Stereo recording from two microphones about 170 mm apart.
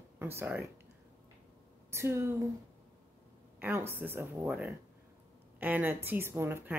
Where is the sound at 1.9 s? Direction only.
15° right (ahead or behind).